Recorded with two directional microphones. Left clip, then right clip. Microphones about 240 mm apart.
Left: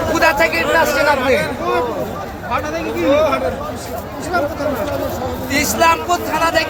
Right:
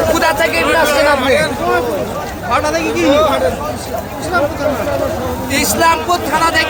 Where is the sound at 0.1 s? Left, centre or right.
Centre.